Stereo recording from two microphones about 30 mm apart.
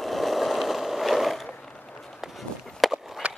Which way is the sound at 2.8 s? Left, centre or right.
Centre.